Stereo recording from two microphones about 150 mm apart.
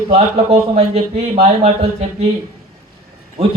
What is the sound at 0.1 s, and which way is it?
Speech, 40° right (ahead or behind).